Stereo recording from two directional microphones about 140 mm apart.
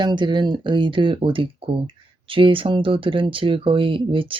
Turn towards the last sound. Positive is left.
turn(degrees=-40)  # may be behind; listen again after turning